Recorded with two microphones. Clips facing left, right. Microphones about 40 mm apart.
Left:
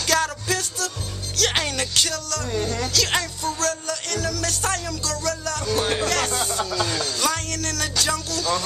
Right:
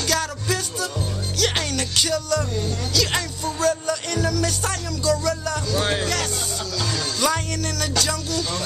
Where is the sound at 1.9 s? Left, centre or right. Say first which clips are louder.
Right 3 dB; centre.